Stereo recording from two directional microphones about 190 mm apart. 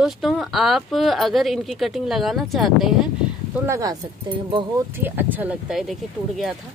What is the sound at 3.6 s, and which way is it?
Speech, 15° right (ahead or behind).